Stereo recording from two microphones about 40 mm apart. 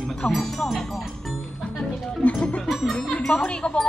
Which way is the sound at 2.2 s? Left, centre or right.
Left.